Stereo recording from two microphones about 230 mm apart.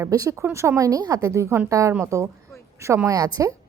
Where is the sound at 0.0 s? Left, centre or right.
Centre.